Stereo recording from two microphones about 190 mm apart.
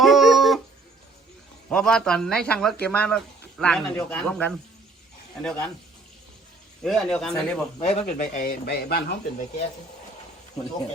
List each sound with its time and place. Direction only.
0.0 s dog: centre (ahead or behind)
1.7 s speech: 5° left (ahead or behind)
6.8 s speech: centre (ahead or behind)
7.8 s speech: 40° left (ahead or behind); by 9.1 s 55° left (ahead or behind)